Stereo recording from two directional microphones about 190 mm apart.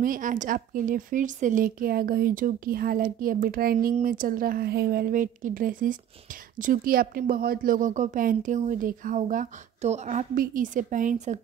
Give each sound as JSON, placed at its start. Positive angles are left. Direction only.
{"t": 0.0, "sound": "a woman's voice", "side_deg": -45}